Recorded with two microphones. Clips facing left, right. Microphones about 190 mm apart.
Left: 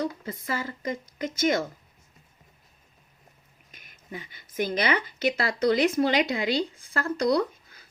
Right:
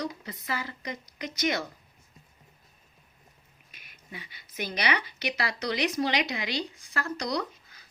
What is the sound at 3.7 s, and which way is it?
Speech, 45° left (ahead or behind).